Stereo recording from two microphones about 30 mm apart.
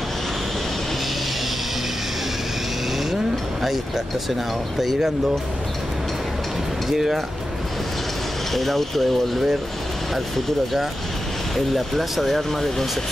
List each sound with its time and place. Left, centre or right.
3.6 s speech: centre
6.9 s speech: centre
8.5 s speech: centre
11.5 s speech: centre